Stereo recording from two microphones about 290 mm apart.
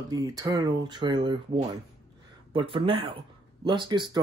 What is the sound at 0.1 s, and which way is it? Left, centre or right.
Speech, centre.